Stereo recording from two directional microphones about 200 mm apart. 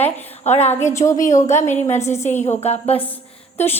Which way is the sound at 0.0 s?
10° left (ahead or behind).